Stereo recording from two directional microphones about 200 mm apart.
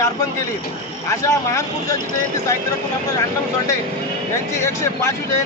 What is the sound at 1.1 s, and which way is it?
A man's voice, 15° left (ahead or behind).